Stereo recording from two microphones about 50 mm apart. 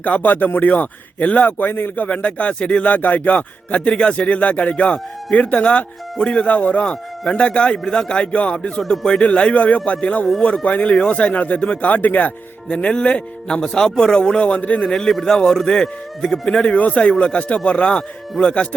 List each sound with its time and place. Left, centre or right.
0.0 s speech: left
2.0 s speech: left
11.6 s speech: centre
11.9 s speech: left
14.8 s speech: centre
16.6 s speech: left